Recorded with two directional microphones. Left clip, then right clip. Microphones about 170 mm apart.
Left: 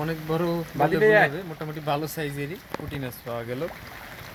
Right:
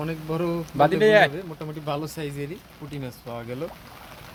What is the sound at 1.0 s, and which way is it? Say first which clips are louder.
Speech: even; 70° right (ahead or behind).